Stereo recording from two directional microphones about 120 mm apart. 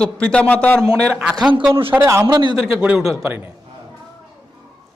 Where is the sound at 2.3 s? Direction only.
40° right (ahead or behind).